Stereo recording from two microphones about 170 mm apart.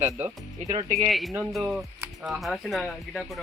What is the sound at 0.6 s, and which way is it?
Speech, 40° right (ahead or behind).